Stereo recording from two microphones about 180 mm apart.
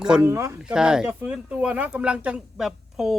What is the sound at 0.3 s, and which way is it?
Speech, 15° right (ahead or behind).